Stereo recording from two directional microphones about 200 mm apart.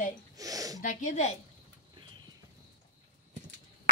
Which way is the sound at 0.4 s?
15° right (ahead or behind).